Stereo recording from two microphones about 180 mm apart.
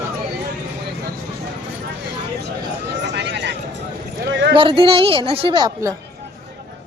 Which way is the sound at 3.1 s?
75° right (ahead or behind).